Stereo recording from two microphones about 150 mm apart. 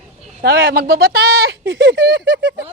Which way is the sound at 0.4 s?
85° right.